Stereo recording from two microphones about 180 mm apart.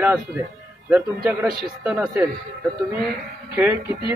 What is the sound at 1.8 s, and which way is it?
Speech, 15° right (ahead or behind).